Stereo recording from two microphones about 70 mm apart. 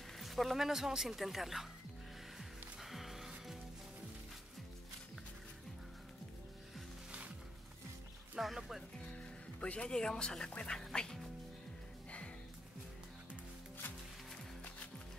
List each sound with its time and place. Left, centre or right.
0.2 s speech: centre
2.3 s music: centre
7.1 s music: centre
8.4 s speech: centre
9.6 s speech: centre